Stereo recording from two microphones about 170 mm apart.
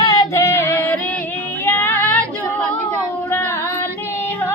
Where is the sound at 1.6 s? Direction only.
15° left (ahead or behind).